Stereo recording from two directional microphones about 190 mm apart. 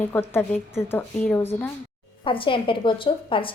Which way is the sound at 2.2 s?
25° left (ahead or behind).